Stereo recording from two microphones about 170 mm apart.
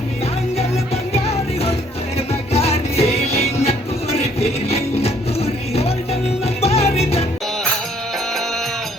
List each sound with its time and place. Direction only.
1.1 s music: 35° left (ahead or behind)